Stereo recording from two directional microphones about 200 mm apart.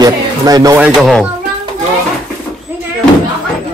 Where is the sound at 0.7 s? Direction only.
5° right (ahead or behind).